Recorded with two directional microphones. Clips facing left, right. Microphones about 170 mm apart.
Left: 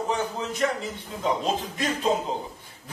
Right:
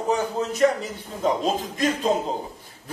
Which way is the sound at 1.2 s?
40° right (ahead or behind).